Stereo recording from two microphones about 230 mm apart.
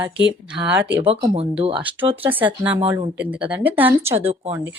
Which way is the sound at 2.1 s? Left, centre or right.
Centre.